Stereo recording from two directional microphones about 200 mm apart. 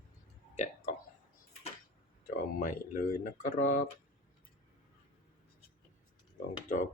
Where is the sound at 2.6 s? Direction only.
40° left (ahead or behind).